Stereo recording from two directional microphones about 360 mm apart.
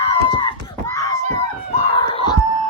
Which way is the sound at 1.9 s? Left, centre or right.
Centre.